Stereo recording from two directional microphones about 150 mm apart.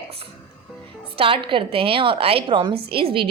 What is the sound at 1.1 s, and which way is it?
Speech, 35° right (ahead or behind).